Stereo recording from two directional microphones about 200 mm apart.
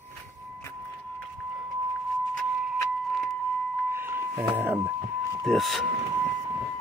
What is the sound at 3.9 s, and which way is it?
Music, 10° right (ahead or behind).